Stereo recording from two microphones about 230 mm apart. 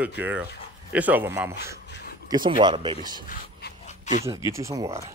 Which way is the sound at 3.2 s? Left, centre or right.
Left.